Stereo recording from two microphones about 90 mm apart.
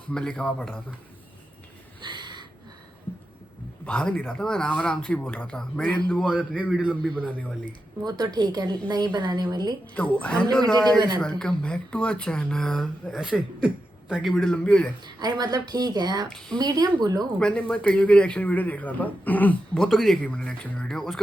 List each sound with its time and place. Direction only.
0.1 s a man's voice: 10° left (ahead or behind)
2.0 s a sound: 55° right (ahead or behind)
3.8 s a man's voice: 15° left (ahead or behind)
6.1 s a man's voice: 10° right (ahead or behind)
7.7 s speech: 50° right (ahead or behind)
9.9 s a man's voice: 15° left (ahead or behind)
13.2 s a man's voice: 10° right (ahead or behind)
14.5 s a man's voice: 15° left (ahead or behind)
15.0 s speech: 50° right (ahead or behind)
17.4 s a man's voice: 15° left (ahead or behind)
19.8 s a man's voice: centre (ahead or behind)
20.2 s a man's voice: 10° left (ahead or behind)
20.8 s a man's voice: centre (ahead or behind)